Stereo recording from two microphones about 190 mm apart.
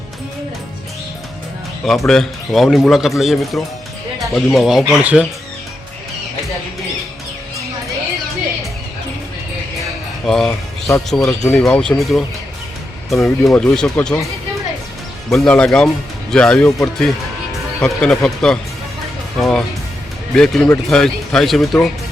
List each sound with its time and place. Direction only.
1.8 s speech: centre (ahead or behind)
10.2 s speech: centre (ahead or behind)
11.2 s speech: 20° left (ahead or behind)
11.5 s speech: 5° left (ahead or behind)
15.3 s speech: 5° left (ahead or behind)